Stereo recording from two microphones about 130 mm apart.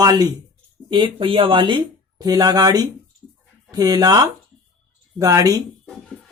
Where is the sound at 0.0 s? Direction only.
30° right (ahead or behind).